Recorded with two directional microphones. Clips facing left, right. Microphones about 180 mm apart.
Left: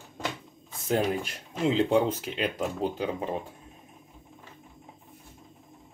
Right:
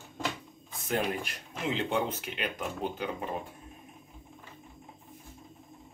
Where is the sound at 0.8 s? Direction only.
30° left (ahead or behind).